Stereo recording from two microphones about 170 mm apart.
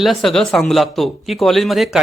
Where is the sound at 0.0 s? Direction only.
Centre (ahead or behind).